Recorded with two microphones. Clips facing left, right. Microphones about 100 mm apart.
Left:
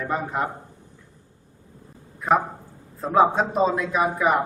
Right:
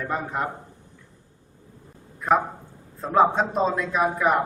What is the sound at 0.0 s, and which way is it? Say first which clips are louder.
Speech: left 2 dB; centre (ahead or behind).